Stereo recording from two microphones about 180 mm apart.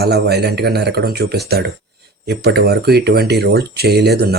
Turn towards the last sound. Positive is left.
turn(degrees=-65)  # may be behind; listen again after turning